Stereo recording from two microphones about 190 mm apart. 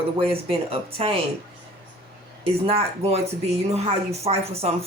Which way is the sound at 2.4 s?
30° right (ahead or behind).